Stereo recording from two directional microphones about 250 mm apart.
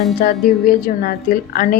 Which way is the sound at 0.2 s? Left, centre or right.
Left.